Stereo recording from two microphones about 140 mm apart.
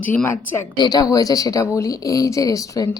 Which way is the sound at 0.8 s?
30° left (ahead or behind).